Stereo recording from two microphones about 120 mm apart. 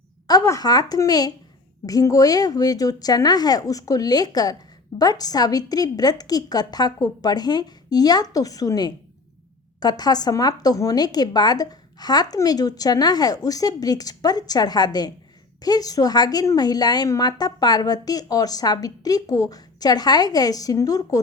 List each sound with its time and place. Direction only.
0.3 s a woman's voice: 30° left (ahead or behind)